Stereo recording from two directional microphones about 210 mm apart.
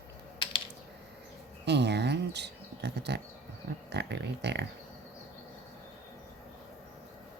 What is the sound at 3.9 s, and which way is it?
Speech, 55° right (ahead or behind).